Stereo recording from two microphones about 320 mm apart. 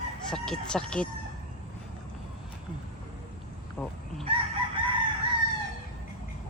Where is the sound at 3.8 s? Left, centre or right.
Centre.